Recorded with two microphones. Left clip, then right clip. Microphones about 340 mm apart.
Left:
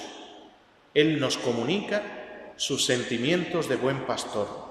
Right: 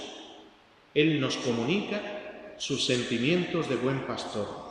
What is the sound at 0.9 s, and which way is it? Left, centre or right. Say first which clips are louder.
A man's voice: left 3 dB; left.